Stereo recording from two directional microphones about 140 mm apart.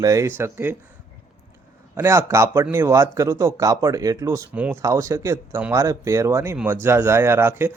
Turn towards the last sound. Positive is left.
turn(degrees=-15)  # may be behind; listen again after turning